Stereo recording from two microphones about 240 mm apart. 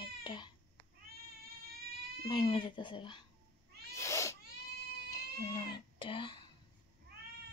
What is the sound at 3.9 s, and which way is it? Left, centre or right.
Cat, centre.